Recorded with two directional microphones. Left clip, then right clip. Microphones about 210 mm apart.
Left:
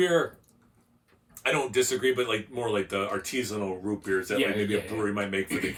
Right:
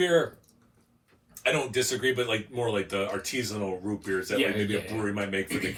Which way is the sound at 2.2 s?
15° left (ahead or behind).